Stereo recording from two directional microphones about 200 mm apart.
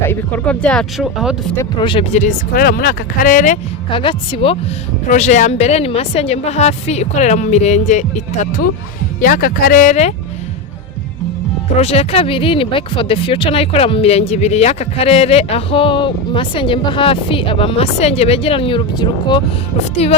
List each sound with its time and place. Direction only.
0.1 s speech: 10° left (ahead or behind)
1.5 s a woman's voice: 25° left (ahead or behind); by 3.6 s 40° left (ahead or behind)
3.8 s speech: 25° left (ahead or behind)
5.0 s a woman's voice: 35° left (ahead or behind)
11.8 s speech: 30° left (ahead or behind)